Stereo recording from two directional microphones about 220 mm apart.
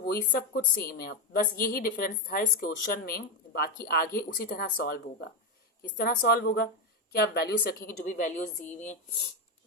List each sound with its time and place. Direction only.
0.3 s a woman's voice: 45° left (ahead or behind)
6.0 s a woman's voice: 40° left (ahead or behind)
8.0 s a woman's voice: 35° left (ahead or behind)